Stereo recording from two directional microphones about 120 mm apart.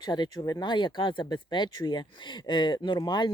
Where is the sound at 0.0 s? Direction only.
35° left (ahead or behind).